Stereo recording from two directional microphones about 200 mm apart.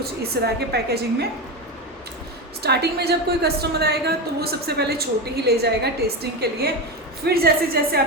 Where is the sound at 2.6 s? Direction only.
55° right (ahead or behind).